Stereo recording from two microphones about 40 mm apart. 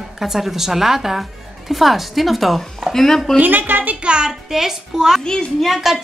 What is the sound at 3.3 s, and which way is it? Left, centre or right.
Speech, right.